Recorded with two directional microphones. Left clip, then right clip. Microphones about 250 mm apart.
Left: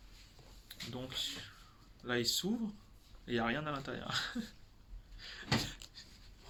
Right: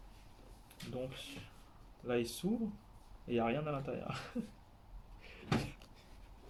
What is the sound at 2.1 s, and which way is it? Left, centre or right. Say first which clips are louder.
Speech: left 2 dB; centre.